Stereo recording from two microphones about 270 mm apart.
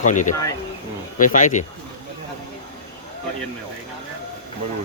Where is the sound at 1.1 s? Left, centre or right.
Left.